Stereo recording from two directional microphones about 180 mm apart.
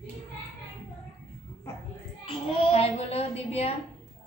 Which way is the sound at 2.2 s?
35° left (ahead or behind).